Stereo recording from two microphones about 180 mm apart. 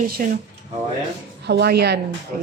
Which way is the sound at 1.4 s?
65° right (ahead or behind).